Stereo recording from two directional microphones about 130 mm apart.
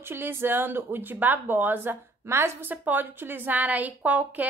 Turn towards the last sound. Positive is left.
turn(degrees=-10)  # may be behind; listen again after turning